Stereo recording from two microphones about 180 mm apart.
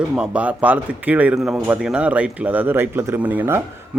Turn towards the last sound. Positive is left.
turn(degrees=-10)  # may be behind; listen again after turning